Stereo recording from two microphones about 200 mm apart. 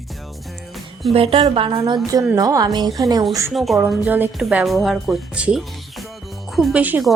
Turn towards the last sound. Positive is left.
turn(degrees=-5)  # may be behind; listen again after turning